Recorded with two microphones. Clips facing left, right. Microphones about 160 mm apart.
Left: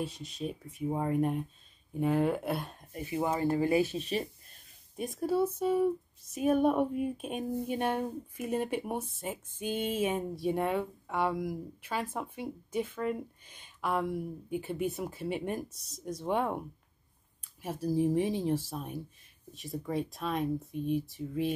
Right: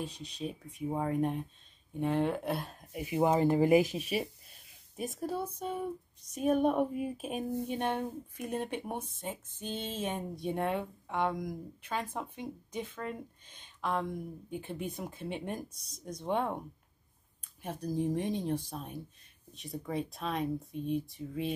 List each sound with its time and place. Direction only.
0.0 s a woman's voice: centre (ahead or behind)
3.2 s a woman's voice: 20° right (ahead or behind); by 21.5 s centre (ahead or behind)